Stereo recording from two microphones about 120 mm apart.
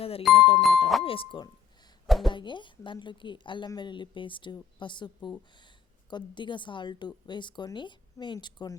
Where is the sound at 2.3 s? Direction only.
40° left (ahead or behind).